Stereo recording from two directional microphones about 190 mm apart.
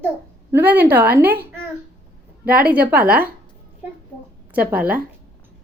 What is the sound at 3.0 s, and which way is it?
Speech, 50° right (ahead or behind).